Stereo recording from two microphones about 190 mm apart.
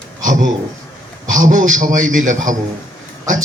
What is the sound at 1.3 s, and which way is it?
A man's voice, 45° right (ahead or behind).